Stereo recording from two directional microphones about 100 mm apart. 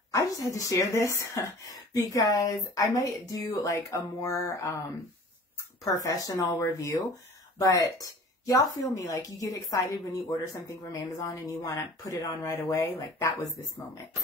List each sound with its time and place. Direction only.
0.1 s speech: 35° left (ahead or behind)
6.0 s speech: 35° left (ahead or behind)